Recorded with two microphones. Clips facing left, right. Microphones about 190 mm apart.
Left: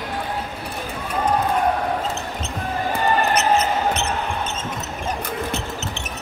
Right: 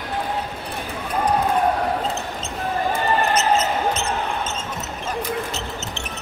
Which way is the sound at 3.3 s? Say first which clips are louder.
Left 1 dB; 65° left (ahead or behind).